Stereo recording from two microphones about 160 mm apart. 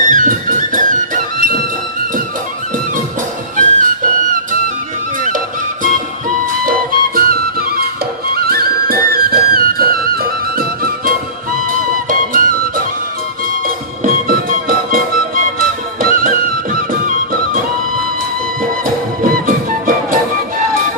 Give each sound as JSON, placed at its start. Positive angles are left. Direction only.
{"t": 0.1, "sound": "music", "side_deg": -55}
{"t": 3.6, "sound": "music", "side_deg": -55}
{"t": 5.8, "sound": "music", "side_deg": -55}
{"t": 7.2, "sound": "music", "side_deg": -65}
{"t": 12.0, "sound": "music", "side_deg": -55}
{"t": 19.2, "sound": "music", "side_deg": -60}